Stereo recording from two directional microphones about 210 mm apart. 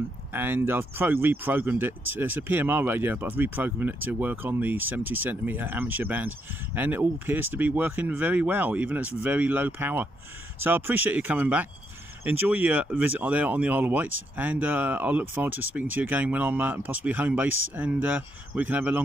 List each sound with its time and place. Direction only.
0.3 s speech: 10° right (ahead or behind)